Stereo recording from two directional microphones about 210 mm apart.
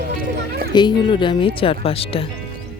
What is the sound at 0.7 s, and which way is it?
Speech, 20° left (ahead or behind).